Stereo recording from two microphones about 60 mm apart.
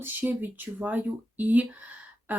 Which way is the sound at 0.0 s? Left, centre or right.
Right.